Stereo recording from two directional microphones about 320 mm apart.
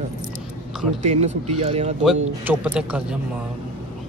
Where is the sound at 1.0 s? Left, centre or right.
Centre.